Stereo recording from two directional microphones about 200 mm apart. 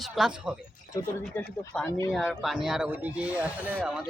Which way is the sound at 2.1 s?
Centre (ahead or behind).